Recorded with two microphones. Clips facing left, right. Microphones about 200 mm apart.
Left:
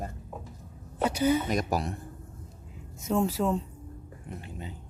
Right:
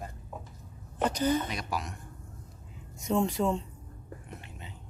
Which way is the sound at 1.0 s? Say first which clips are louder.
Left 2 dB; 10° left (ahead or behind).